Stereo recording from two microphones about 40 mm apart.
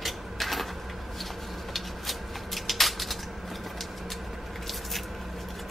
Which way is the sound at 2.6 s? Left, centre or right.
Centre.